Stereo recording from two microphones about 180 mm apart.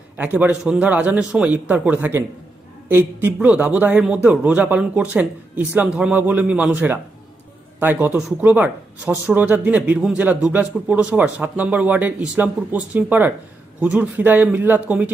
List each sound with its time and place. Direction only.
0.2 s speech: 10° right (ahead or behind)